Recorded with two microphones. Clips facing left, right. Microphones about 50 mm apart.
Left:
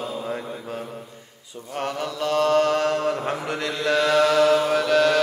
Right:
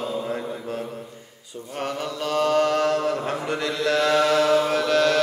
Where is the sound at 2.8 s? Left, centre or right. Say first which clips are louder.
Even; left.